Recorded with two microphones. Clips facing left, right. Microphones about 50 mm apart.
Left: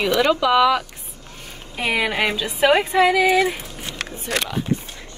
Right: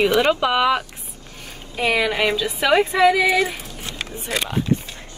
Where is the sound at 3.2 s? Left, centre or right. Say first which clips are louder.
Left 2 dB; left.